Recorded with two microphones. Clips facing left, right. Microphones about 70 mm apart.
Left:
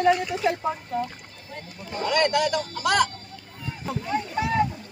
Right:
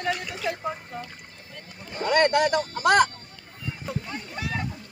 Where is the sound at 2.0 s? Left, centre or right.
Right.